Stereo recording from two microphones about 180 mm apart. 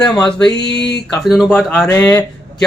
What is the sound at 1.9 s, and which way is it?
Speech, 20° left (ahead or behind).